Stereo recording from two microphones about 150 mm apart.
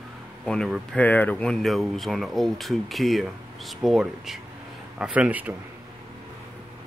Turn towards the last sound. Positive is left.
turn(degrees=-10)  # may be behind; listen again after turning